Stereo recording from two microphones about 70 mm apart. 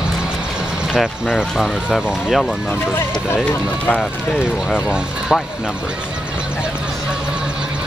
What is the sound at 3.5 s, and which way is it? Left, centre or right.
Speech, centre.